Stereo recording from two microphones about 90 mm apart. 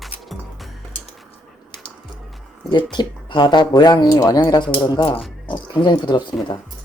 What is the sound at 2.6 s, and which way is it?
Speech, 60° left (ahead or behind).